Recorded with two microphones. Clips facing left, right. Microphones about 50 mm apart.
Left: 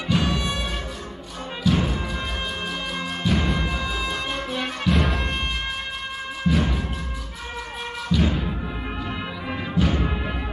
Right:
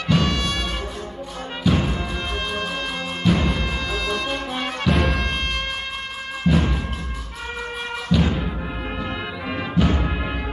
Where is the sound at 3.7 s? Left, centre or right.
Centre.